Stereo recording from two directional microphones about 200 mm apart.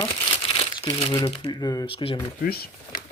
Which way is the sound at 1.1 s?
20° left (ahead or behind).